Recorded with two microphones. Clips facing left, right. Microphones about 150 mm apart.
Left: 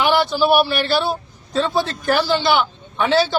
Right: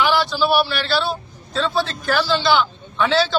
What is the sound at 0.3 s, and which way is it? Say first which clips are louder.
Speech: left 3 dB; 20° left (ahead or behind).